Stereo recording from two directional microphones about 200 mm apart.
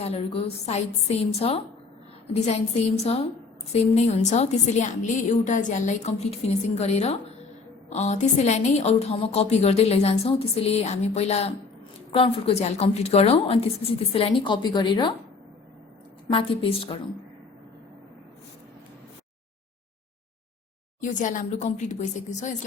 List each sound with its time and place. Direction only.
0.0 s a woman's voice: 30° left (ahead or behind)
2.9 s a woman's voice: 35° left (ahead or behind)
16.3 s a woman's voice: 25° left (ahead or behind)
21.0 s a woman's voice: 40° left (ahead or behind)